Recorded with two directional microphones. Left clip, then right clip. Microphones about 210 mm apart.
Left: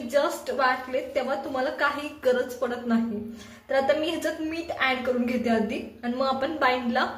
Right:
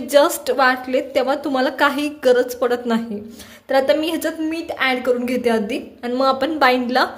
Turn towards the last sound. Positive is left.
turn(degrees=-50)  # may be behind; listen again after turning